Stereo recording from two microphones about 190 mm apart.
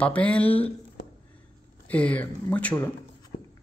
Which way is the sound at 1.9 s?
5° left (ahead or behind).